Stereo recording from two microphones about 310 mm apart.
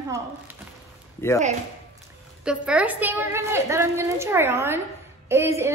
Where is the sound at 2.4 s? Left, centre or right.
Centre.